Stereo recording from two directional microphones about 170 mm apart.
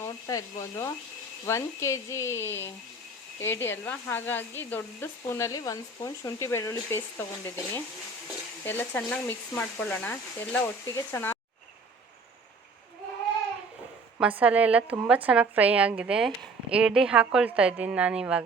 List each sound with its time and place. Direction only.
0.0 s speech: 20° left (ahead or behind)
14.2 s a woman's voice: 10° right (ahead or behind)